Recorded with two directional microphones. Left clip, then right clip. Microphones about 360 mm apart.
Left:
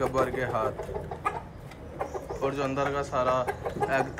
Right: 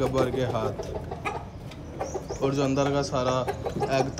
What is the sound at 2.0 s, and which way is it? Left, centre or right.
Speech, centre.